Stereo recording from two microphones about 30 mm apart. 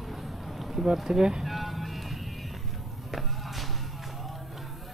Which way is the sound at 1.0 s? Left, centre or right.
Right.